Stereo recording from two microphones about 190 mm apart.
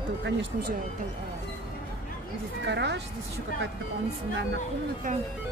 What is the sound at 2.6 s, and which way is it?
Speech, 65° right (ahead or behind).